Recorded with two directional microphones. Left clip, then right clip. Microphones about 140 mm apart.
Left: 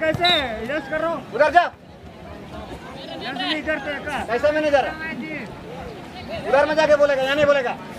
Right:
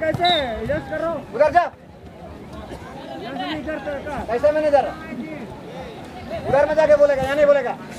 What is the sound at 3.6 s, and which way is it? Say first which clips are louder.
Speech: left 2 dB; 35° left (ahead or behind).